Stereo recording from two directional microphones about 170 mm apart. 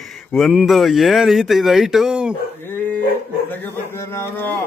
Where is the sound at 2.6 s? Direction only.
10° left (ahead or behind).